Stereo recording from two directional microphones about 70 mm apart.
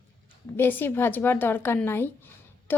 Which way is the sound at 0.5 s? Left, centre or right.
Left.